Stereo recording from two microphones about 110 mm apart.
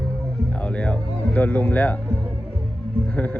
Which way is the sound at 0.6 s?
10° left (ahead or behind).